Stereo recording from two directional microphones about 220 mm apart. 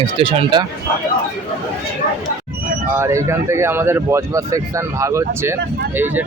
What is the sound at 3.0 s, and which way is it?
Speech, 15° right (ahead or behind).